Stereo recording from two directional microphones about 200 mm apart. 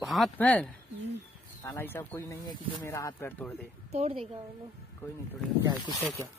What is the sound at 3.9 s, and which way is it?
Speech, 30° right (ahead or behind).